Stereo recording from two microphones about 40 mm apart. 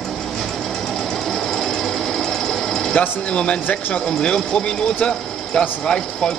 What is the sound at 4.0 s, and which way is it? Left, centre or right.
A man's voice, centre.